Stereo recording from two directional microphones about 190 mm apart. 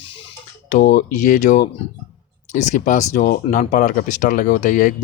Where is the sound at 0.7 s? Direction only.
45° left (ahead or behind).